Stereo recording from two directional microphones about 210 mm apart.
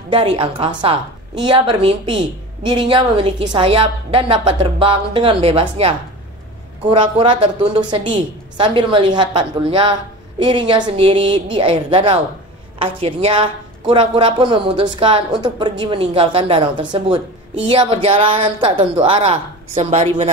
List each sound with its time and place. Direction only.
0.1 s a woman's voice: 25° right (ahead or behind)